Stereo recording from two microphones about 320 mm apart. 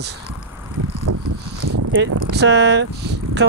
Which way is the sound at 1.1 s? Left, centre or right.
Right.